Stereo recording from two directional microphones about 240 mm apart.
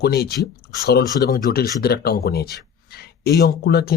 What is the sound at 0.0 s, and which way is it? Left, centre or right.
Speech, left.